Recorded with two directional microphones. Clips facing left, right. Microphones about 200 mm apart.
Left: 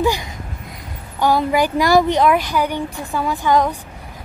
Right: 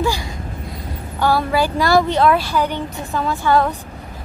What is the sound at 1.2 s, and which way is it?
A woman's voice, 15° left (ahead or behind).